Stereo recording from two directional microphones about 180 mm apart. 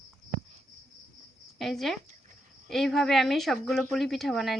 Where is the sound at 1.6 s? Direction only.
Centre (ahead or behind).